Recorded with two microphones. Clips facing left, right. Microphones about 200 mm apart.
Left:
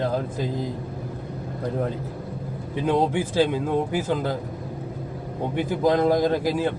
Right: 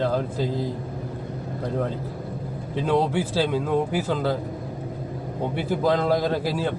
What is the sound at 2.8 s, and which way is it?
Speech, 20° left (ahead or behind).